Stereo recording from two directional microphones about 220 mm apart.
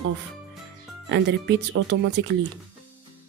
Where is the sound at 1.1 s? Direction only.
55° right (ahead or behind).